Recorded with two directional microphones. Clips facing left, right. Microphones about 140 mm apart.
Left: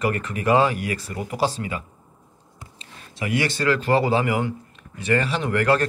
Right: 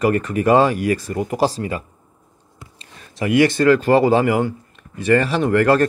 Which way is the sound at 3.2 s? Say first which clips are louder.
Right 9 dB; 50° right (ahead or behind).